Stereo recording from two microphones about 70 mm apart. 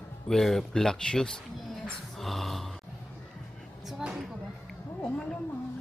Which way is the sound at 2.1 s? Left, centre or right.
Centre.